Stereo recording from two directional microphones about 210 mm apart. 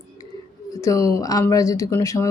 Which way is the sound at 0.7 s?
15° left (ahead or behind).